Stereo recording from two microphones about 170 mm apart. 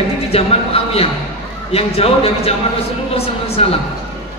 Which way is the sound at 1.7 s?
35° left (ahead or behind).